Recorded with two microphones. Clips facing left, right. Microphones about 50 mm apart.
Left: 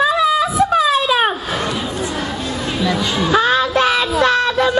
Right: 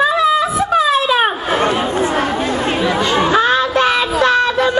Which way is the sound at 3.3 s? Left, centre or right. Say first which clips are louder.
Left 3 dB; centre.